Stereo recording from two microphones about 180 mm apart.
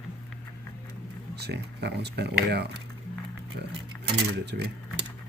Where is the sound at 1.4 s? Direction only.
65° right (ahead or behind).